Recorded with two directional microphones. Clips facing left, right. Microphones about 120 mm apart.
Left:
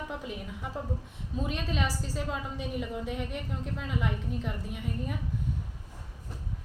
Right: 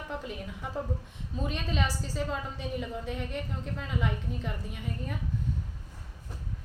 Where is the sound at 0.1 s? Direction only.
5° left (ahead or behind).